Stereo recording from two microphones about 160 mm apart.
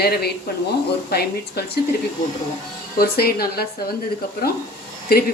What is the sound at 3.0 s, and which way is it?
Speech, 75° left (ahead or behind).